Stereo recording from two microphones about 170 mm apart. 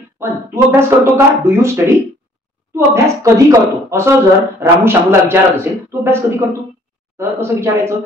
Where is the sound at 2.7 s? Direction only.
15° right (ahead or behind).